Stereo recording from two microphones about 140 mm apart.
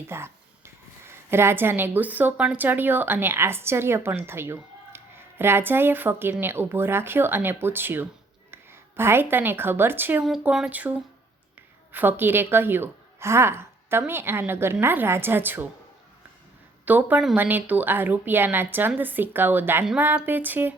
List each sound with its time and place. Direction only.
0.1 s speech: 20° right (ahead or behind)
10.2 s a woman's voice: 5° right (ahead or behind)
16.8 s a woman's voice: 10° right (ahead or behind)